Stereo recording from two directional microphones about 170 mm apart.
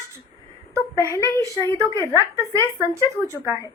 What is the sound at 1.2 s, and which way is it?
A woman's voice, 20° right (ahead or behind).